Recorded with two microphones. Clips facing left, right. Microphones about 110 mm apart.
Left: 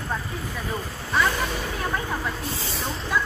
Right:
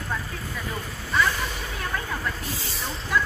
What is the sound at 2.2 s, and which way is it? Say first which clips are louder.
Speech: left 2 dB; centre (ahead or behind).